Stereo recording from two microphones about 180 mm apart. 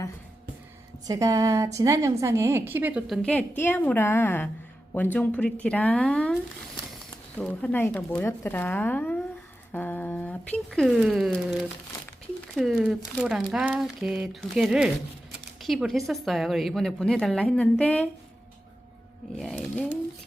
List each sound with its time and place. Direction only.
1.0 s a woman's voice: 20° right (ahead or behind)
3.2 s a woman's voice: 5° left (ahead or behind)
19.4 s a woman's voice: centre (ahead or behind)